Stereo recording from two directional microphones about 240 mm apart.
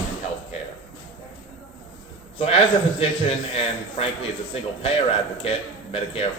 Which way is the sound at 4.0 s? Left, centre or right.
Left.